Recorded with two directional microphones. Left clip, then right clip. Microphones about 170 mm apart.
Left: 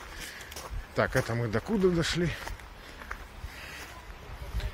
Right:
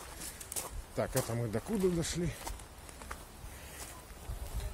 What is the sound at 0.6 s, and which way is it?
Speech, 10° right (ahead or behind).